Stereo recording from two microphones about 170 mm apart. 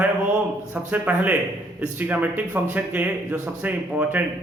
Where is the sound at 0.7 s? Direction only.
10° right (ahead or behind).